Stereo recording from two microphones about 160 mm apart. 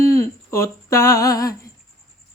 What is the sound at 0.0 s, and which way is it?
Humming, 20° left (ahead or behind).